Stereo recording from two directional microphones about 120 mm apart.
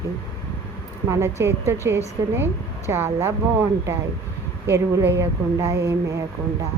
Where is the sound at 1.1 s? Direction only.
25° right (ahead or behind).